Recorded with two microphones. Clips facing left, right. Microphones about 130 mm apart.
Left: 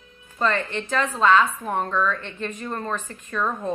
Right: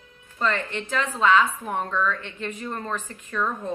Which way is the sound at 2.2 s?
15° right (ahead or behind).